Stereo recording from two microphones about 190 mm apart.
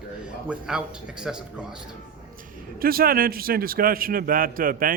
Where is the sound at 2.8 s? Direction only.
50° right (ahead or behind).